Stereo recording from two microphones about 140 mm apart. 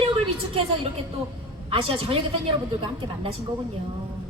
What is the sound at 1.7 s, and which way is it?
Speech, 40° right (ahead or behind).